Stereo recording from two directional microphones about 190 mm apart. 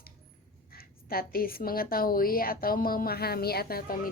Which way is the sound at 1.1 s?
50° left (ahead or behind).